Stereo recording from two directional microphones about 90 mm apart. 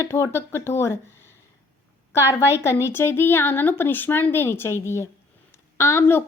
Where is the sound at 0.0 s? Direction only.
30° left (ahead or behind).